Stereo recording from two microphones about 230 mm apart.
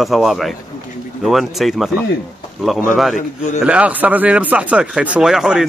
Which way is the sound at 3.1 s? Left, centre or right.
Left.